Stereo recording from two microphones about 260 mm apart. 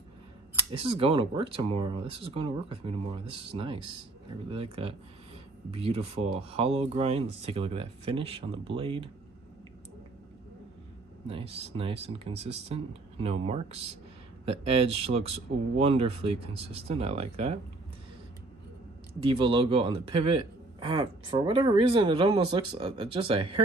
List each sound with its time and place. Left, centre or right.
0.7 s speech: right
11.2 s speech: right
19.1 s speech: centre